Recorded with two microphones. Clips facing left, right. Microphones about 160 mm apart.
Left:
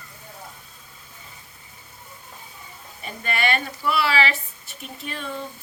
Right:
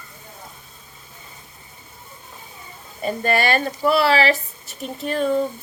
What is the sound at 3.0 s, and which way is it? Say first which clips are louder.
Speech: right 6 dB; 40° right (ahead or behind).